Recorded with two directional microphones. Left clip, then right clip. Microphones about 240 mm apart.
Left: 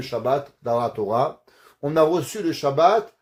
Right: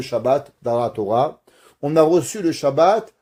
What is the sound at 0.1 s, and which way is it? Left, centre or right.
Speech, right.